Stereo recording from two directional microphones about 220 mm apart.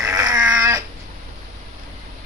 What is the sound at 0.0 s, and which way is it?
Dog, 15° right (ahead or behind).